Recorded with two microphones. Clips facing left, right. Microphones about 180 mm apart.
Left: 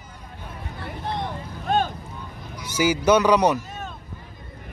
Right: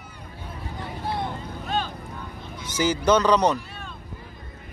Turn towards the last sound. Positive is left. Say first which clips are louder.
# left 4 dB
turn(degrees=45)  # may be behind; listen again after turning